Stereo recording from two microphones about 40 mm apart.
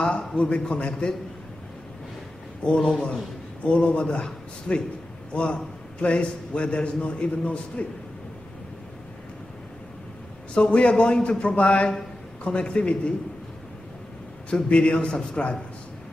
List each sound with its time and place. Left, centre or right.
0.0 s a man's voice: left
2.6 s a man's voice: left
2.9 s a man's voice: centre
3.6 s a man's voice: left
10.5 s a man's voice: left
14.5 s a man's voice: left